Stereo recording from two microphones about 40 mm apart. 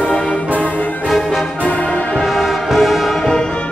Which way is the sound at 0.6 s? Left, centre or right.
Left.